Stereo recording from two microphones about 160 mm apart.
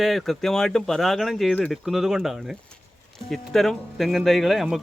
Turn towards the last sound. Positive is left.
turn(degrees=0)  # may be behind; listen again after turning